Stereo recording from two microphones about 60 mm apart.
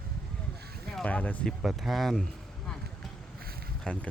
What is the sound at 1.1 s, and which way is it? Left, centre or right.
Speech, left.